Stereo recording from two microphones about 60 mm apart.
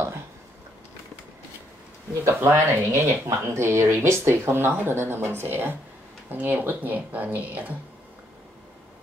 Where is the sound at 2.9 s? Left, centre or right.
Right.